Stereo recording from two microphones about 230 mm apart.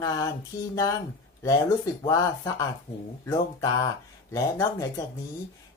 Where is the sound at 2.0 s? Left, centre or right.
Centre.